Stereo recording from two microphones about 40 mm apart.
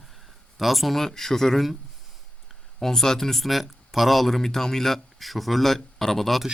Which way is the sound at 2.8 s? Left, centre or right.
Centre.